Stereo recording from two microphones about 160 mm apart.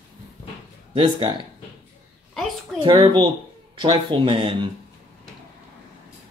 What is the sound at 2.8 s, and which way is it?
Speech, 25° right (ahead or behind).